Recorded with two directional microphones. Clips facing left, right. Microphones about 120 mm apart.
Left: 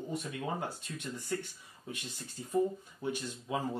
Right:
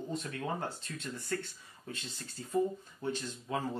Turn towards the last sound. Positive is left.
turn(degrees=15)  # may be behind; listen again after turning